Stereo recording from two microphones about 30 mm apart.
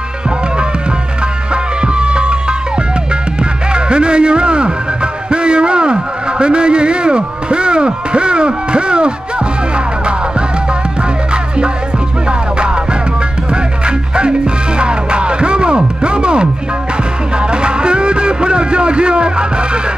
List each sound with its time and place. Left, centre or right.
1.5 s music: right
3.7 s music: right
12.3 s music: right